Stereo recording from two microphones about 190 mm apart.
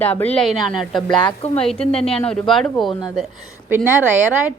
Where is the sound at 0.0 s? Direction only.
10° left (ahead or behind).